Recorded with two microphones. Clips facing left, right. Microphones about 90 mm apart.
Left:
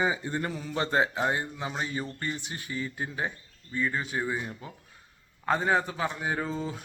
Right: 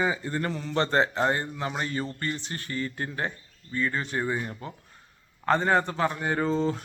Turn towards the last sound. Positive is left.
turn(degrees=5)  # may be behind; listen again after turning